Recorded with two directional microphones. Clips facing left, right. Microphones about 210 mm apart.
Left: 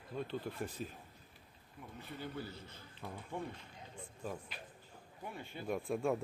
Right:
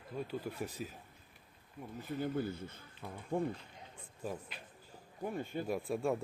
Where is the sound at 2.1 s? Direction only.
50° right (ahead or behind).